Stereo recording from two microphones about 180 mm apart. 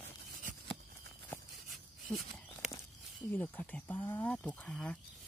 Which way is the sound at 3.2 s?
10° left (ahead or behind).